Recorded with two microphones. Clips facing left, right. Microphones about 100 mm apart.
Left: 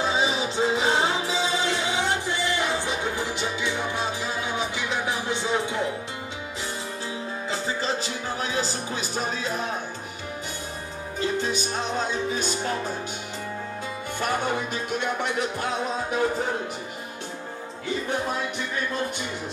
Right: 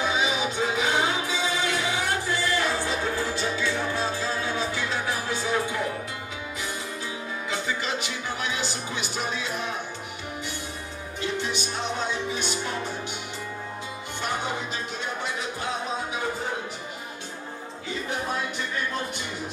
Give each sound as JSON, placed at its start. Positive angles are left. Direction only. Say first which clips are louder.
{"t": 0.0, "sound": "music", "louder": "left 1 dB", "side_deg": 30}
{"t": 7.4, "sound": "music", "louder": "left 2 dB", "side_deg": 30}
{"t": 11.1, "sound": "music", "louder": "left 3 dB", "side_deg": 40}
{"t": 14.2, "sound": "music", "louder": "left 4 dB", "side_deg": 50}